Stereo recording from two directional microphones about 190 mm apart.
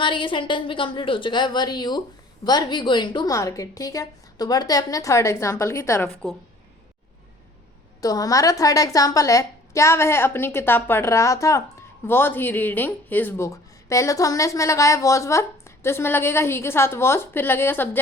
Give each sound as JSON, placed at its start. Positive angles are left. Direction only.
{"t": 0.0, "sound": "a woman's voice", "side_deg": 25}
{"t": 8.0, "sound": "a woman's voice", "side_deg": 20}